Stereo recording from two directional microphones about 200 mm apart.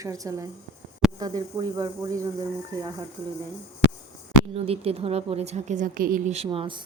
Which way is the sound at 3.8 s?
70° left (ahead or behind).